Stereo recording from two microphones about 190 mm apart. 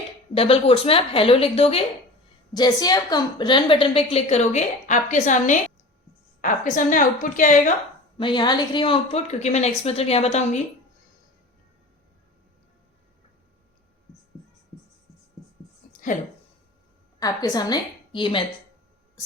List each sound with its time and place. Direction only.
0.3 s a woman's voice: 30° left (ahead or behind)
2.5 s a woman's voice: 20° left (ahead or behind); by 7.7 s 45° left (ahead or behind)
8.2 s a woman's voice: 25° left (ahead or behind)
15.9 s a sound: 45° left (ahead or behind)
17.2 s a woman's voice: 20° left (ahead or behind)